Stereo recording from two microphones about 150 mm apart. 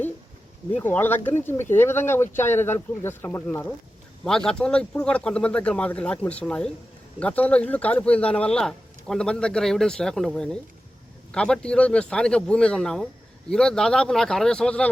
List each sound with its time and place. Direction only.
0.7 s speech: 10° left (ahead or behind)